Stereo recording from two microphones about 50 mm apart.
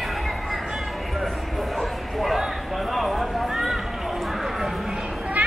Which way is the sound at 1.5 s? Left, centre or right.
Centre.